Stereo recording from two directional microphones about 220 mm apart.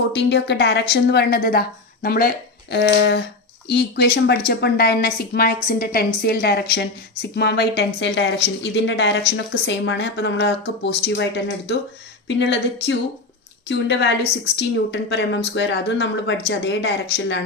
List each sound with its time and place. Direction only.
0.1 s a woman's voice: 50° left (ahead or behind)
12.4 s a woman's voice: 50° left (ahead or behind)